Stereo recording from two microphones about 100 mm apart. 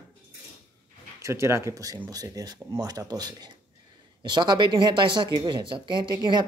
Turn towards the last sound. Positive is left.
turn(degrees=-50)  # may be behind; listen again after turning